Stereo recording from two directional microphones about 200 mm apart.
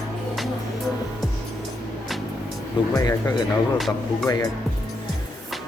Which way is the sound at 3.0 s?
15° left (ahead or behind).